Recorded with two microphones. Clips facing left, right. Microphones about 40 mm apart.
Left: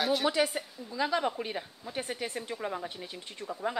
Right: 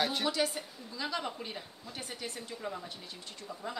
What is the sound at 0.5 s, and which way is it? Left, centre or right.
Speech, left.